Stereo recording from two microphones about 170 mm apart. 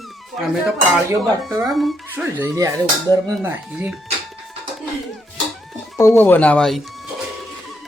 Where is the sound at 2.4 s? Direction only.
15° right (ahead or behind).